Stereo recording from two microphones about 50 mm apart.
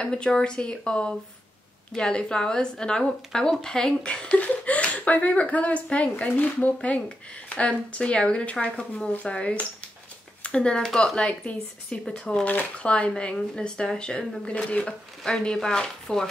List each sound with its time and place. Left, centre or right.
0.0 s a woman's voice: centre
15.4 s a woman's voice: centre